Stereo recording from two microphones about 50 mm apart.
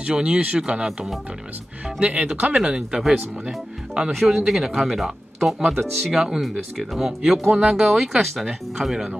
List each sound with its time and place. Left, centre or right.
0.0 s speech: centre
2.0 s speech: right